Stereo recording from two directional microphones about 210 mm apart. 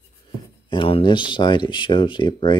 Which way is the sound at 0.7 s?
25° left (ahead or behind).